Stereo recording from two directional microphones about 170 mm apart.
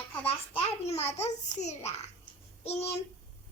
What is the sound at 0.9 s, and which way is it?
A child's voice, 40° left (ahead or behind).